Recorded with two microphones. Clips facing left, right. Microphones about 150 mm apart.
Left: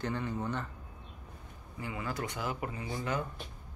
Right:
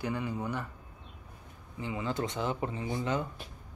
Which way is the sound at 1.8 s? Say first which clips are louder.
Right 4 dB; 20° right (ahead or behind).